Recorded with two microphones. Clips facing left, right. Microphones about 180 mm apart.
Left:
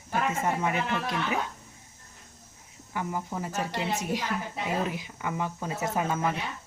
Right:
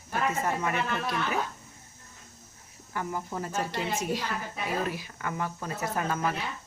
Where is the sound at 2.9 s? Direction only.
15° left (ahead or behind).